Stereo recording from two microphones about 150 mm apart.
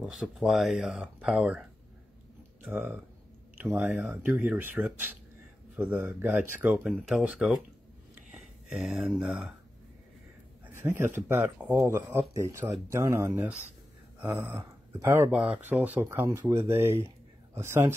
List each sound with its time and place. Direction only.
0.1 s speech: centre (ahead or behind)
8.1 s a sound: 5° right (ahead or behind)
10.8 s speech: 15° right (ahead or behind)